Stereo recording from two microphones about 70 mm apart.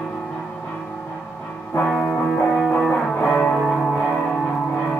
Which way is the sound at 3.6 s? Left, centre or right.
Centre.